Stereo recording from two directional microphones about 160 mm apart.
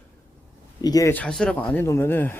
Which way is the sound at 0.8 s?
20° left (ahead or behind).